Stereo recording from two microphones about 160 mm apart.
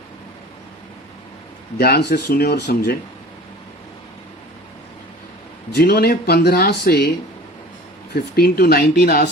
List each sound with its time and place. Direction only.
1.8 s speech: 85° left
5.7 s speech: 80° left
8.1 s speech: 70° left (ahead or behind)